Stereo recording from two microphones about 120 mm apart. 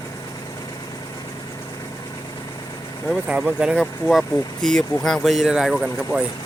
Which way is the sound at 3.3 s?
10° right (ahead or behind).